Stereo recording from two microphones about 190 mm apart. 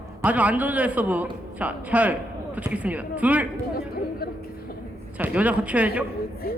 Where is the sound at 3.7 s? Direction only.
55° left (ahead or behind).